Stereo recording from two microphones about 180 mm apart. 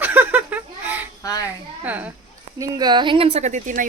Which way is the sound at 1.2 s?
20° left (ahead or behind).